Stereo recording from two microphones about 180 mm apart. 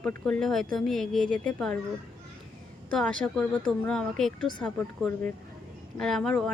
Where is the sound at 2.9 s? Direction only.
5° left (ahead or behind).